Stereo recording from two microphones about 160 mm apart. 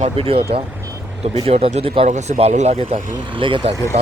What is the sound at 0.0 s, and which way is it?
Speech, 35° right (ahead or behind).